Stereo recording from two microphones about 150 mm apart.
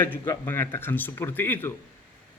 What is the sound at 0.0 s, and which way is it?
A man's voice, 15° left (ahead or behind).